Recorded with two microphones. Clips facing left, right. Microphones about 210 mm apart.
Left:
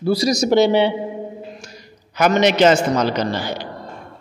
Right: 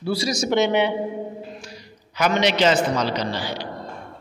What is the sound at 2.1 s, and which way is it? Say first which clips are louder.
A man's voice: left 5 dB; 50° left (ahead or behind).